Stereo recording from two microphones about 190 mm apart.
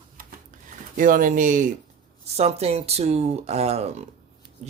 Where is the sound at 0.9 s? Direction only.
45° right (ahead or behind).